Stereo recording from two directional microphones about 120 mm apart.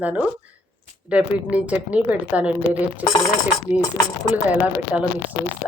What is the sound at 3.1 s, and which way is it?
Speech, 30° left (ahead or behind).